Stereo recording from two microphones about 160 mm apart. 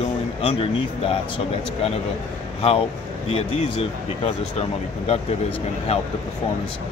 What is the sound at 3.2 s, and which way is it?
Speech, 40° left (ahead or behind).